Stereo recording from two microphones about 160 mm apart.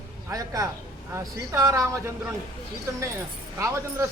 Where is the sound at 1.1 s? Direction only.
20° right (ahead or behind).